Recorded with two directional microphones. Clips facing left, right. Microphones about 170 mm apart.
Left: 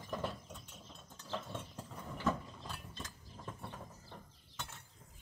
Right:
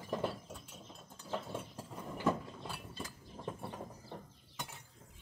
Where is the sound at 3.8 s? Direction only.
15° right (ahead or behind).